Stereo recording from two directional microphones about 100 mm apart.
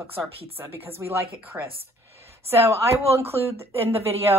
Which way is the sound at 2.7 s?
25° right (ahead or behind).